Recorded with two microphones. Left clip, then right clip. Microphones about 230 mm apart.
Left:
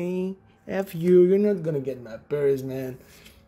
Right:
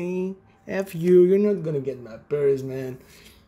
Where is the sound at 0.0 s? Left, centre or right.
Centre.